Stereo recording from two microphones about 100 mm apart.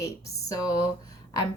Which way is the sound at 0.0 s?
35° left (ahead or behind).